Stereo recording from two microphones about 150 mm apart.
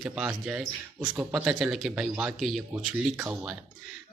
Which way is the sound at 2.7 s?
15° right (ahead or behind).